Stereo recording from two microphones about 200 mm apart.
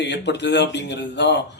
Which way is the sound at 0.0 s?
60° left (ahead or behind).